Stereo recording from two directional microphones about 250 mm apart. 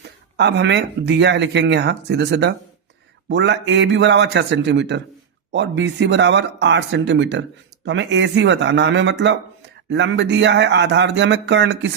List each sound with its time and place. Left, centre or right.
0.3 s speech: right